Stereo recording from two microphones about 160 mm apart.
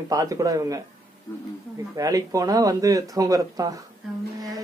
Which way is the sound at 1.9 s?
20° right (ahead or behind).